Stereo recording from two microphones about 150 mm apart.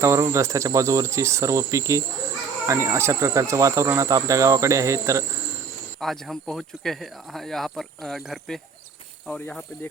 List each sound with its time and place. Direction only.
0.0 s speech: 20° right (ahead or behind)
6.0 s speech: centre (ahead or behind)